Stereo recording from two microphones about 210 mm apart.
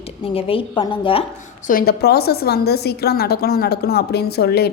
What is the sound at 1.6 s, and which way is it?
A woman's voice, 45° left (ahead or behind).